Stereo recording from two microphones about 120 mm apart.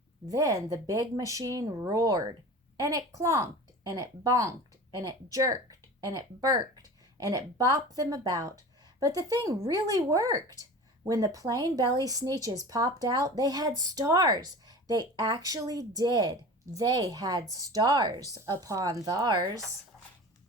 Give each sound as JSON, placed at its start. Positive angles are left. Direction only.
{"t": 0.3, "sound": "speech", "side_deg": -30}
{"t": 18.5, "sound": "speech", "side_deg": -25}